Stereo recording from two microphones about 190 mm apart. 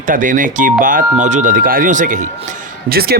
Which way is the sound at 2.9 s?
55° right (ahead or behind).